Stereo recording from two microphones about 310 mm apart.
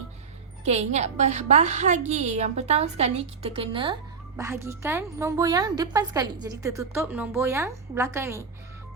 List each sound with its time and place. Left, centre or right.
0.6 s a woman's voice: right